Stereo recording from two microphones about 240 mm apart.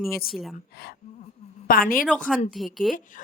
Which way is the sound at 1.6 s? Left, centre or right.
Left.